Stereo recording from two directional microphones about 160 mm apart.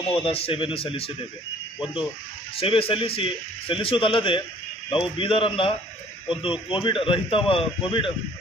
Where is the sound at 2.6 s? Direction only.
35° left (ahead or behind).